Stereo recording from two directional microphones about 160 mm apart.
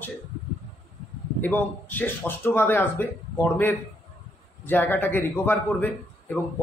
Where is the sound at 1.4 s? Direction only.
10° left (ahead or behind).